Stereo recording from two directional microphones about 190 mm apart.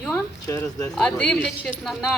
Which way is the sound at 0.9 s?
5° left (ahead or behind).